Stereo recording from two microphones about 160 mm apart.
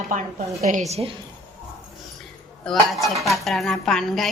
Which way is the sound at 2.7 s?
Centre (ahead or behind).